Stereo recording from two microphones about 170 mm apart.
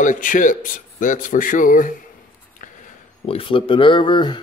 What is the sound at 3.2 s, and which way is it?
Speech, 30° left (ahead or behind).